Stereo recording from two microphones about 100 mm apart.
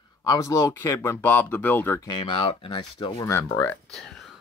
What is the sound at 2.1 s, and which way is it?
Speech, 60° left (ahead or behind).